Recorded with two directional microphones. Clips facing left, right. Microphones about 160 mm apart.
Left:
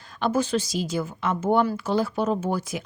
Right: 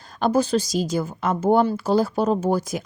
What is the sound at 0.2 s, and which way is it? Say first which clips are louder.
Speech: right 4 dB; 35° right (ahead or behind).